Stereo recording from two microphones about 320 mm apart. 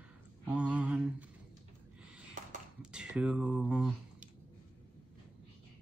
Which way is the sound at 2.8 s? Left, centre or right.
Centre.